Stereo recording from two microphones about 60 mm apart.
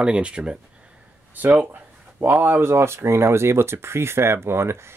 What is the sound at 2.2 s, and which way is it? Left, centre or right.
Speech, right.